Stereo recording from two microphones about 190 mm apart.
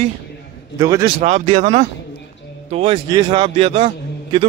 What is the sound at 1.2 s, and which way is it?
A man's voice, 35° right (ahead or behind).